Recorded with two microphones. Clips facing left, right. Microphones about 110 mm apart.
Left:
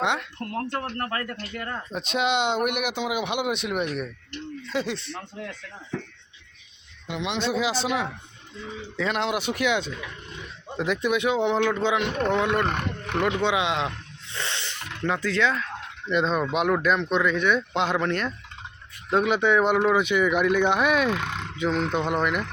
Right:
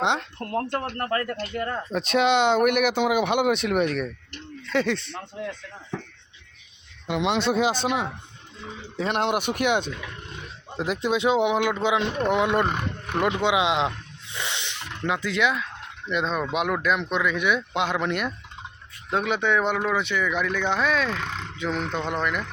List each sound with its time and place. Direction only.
0.0 s speech: 25° right (ahead or behind)
2.6 s speech: 55° right (ahead or behind)
4.6 s speech: 60° right (ahead or behind)
7.1 s speech: 60° right (ahead or behind)
10.8 s speech: 30° right (ahead or behind)
11.4 s speech: 10° right (ahead or behind)
12.6 s speech: 5° right (ahead or behind)
13.2 s speech: 20° right (ahead or behind)
14.3 s a sound: 15° right (ahead or behind)
15.0 s speech: 15° right (ahead or behind)
16.0 s speech: centre (ahead or behind)
19.1 s speech: 5° left (ahead or behind)